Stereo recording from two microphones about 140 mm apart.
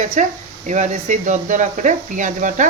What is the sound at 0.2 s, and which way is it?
Speech, 65° right (ahead or behind).